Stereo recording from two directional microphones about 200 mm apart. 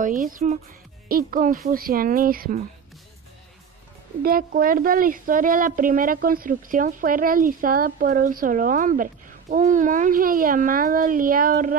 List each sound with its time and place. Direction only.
0.0 s a woman's voice: 40° right (ahead or behind)
4.2 s a woman's voice: 45° right (ahead or behind)